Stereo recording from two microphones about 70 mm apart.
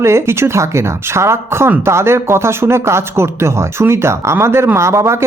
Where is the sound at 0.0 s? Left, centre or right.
Right.